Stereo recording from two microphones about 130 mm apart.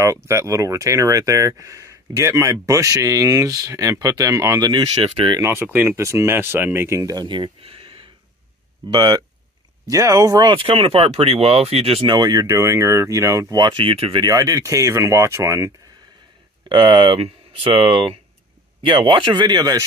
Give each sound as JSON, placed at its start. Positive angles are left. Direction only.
{"t": 0.0, "sound": "speech", "side_deg": -20}
{"t": 5.0, "sound": "speech", "side_deg": -45}
{"t": 5.4, "sound": "speech", "side_deg": -20}
{"t": 8.9, "sound": "speech", "side_deg": -35}
{"t": 10.5, "sound": "speech", "side_deg": -45}
{"t": 12.1, "sound": "speech", "side_deg": -30}
{"t": 14.2, "sound": "speech", "side_deg": -25}
{"t": 16.6, "sound": "speech", "side_deg": -40}